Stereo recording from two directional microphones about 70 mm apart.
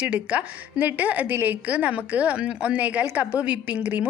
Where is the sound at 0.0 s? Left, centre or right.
Centre.